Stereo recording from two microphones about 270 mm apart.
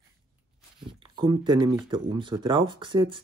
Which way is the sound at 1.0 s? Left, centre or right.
Centre.